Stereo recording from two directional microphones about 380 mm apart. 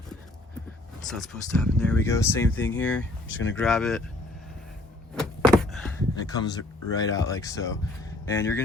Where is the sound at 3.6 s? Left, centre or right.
Centre.